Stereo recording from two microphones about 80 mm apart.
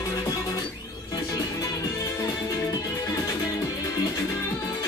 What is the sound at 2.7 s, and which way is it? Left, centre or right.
Music, left.